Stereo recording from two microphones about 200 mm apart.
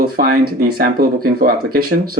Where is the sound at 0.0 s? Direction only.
50° right (ahead or behind).